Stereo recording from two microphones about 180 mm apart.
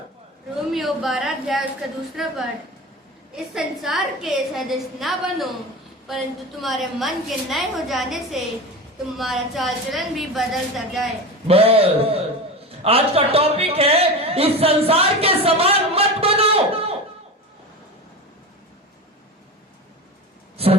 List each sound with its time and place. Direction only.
0.7 s a woman's voice: centre (ahead or behind)
3.3 s a woman's voice: centre (ahead or behind)
6.6 s a woman's voice: centre (ahead or behind)
11.4 s a man's voice: 35° right (ahead or behind)
20.6 s a sound: 35° right (ahead or behind)